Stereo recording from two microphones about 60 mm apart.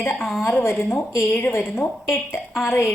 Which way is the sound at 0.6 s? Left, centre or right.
Left.